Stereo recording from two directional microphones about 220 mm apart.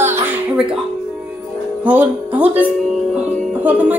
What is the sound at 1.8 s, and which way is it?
Speech, 5° right (ahead or behind).